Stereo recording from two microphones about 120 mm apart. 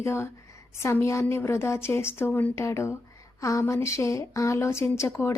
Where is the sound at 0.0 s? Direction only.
20° left (ahead or behind).